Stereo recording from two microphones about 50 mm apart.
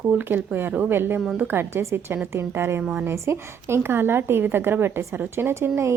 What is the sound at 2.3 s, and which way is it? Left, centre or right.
Speech, right.